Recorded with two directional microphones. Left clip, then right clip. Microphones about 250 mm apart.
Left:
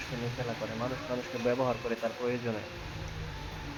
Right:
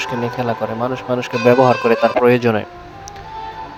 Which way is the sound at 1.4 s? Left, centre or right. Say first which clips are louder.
Right 19 dB; right.